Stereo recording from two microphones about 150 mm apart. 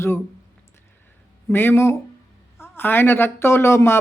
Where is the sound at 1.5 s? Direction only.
15° left (ahead or behind).